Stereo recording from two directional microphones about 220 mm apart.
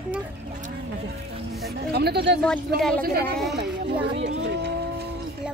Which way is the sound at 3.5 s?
50° right (ahead or behind).